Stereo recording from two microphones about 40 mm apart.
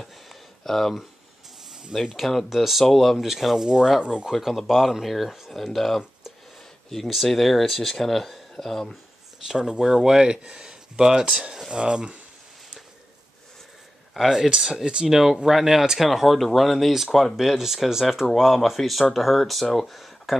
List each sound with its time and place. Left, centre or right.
0.0 s a sound: centre
1.7 s a sound: centre
2.1 s speech: centre
4.0 s cutlery: right
4.3 s speech: centre
7.1 s speech: centre
9.5 s speech: centre
11.7 s cutlery: right
14.1 s speech: centre
16.1 s speech: centre